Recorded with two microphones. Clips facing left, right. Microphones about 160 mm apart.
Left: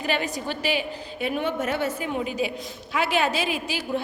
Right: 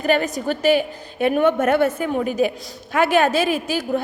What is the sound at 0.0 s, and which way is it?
A woman's voice, 45° right (ahead or behind).